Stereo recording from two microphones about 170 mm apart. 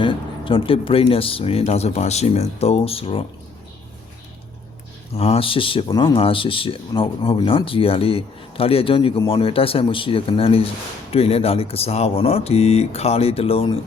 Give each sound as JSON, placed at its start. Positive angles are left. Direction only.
{"t": 0.0, "sound": "speech", "side_deg": 30}
{"t": 5.1, "sound": "speech", "side_deg": 35}